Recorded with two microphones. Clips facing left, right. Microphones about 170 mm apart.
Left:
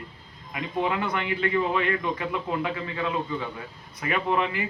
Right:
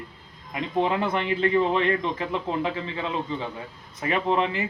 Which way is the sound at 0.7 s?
30° right (ahead or behind).